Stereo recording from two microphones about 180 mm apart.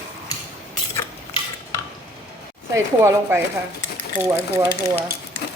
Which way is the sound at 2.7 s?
15° right (ahead or behind).